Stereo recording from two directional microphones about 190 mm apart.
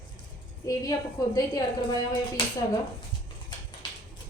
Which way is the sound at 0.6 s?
20° left (ahead or behind).